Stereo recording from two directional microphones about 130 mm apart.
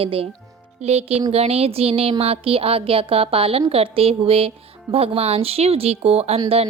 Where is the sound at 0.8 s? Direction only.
55° right (ahead or behind).